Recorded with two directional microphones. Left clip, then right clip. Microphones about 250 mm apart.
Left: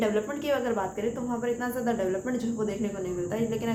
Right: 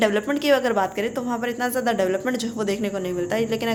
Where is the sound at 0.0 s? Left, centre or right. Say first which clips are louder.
Right 7 dB; right.